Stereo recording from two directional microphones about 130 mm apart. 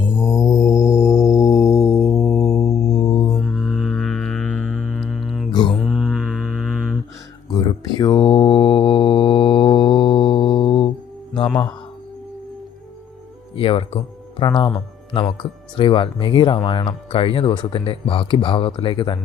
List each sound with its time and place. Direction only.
0.0 s mantra: 20° left (ahead or behind)
2.5 s music: 25° left (ahead or behind)
2.7 s music: 5° left (ahead or behind)
3.0 s music: 30° left (ahead or behind)
3.2 s music: centre (ahead or behind)
5.5 s mantra: 35° left (ahead or behind)
5.7 s mantra: centre (ahead or behind)
7.5 s mantra: 30° left (ahead or behind)
11.3 s music: 35° left (ahead or behind)
13.6 s speech: 45° left (ahead or behind)